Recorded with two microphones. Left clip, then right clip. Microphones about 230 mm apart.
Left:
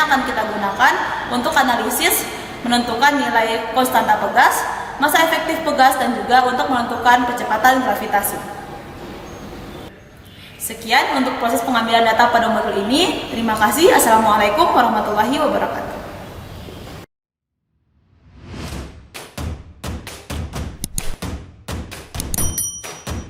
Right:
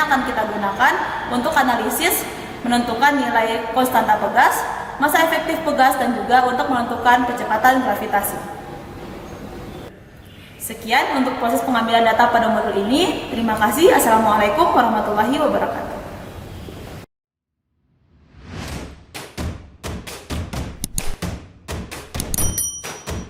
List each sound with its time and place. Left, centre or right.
0.0 s a woman's voice: centre
10.7 s a woman's voice: centre
11.1 s a woman's voice: centre
11.7 s a woman's voice: centre
14.0 s a woman's voice: centre
14.3 s a woman's voice: centre
19.8 s a sound: centre
21.7 s music: centre